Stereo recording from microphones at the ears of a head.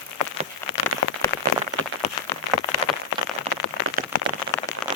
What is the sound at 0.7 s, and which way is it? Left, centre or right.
Rain on surface, left.